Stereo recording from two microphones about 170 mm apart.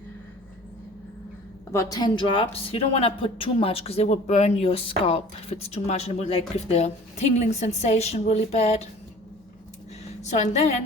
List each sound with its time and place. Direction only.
1.7 s speech: 20° left (ahead or behind); by 8.9 s 35° left (ahead or behind)
10.2 s a woman's voice: 45° left (ahead or behind)